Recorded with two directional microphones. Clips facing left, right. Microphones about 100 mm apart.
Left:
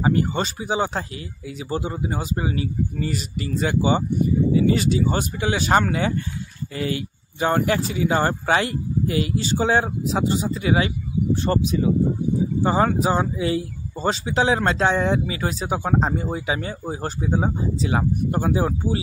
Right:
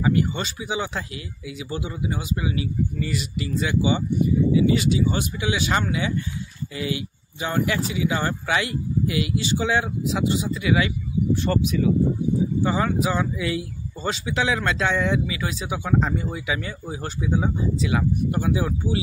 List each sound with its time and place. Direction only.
0.0 s speech: 40° left (ahead or behind)